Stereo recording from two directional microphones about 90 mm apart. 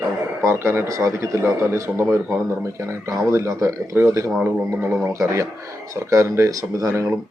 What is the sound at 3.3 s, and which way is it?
Speech, 35° right (ahead or behind).